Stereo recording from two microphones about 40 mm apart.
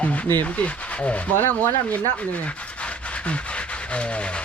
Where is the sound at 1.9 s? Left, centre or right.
Left.